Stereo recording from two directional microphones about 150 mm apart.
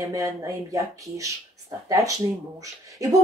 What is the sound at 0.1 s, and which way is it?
A woman's voice, 25° right (ahead or behind).